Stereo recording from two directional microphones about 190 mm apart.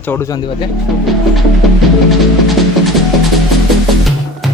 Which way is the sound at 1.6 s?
Centre (ahead or behind).